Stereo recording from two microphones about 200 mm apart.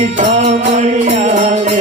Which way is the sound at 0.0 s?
35° right (ahead or behind).